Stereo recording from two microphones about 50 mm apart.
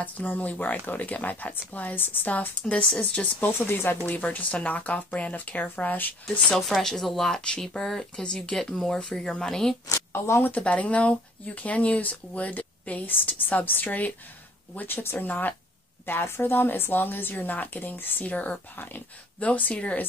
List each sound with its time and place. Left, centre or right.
0.0 s speech: left
2.6 s speech: centre
3.5 s a woman's voice: left
4.1 s speech: left
6.2 s speech: centre
9.8 s a woman's voice: left
10.6 s speech: left
16.1 s a woman's voice: left
18.2 s speech: left